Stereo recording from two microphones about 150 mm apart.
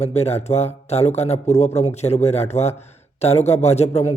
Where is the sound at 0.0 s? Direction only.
45° left (ahead or behind).